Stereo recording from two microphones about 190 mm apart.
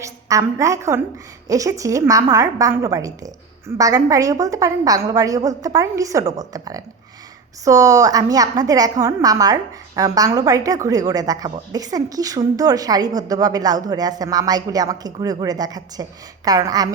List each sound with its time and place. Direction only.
0.0 s a woman's voice: 15° right (ahead or behind)